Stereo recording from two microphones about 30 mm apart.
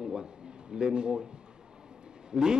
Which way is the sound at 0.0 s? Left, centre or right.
Right.